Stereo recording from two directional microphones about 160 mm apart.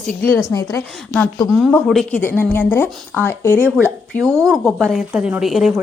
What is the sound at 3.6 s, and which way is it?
Speech, 15° right (ahead or behind).